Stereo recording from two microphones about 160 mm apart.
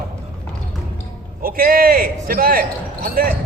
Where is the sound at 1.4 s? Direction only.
65° right (ahead or behind).